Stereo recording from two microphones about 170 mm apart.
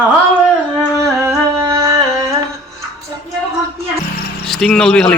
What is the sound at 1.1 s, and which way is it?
Humming, 15° right (ahead or behind).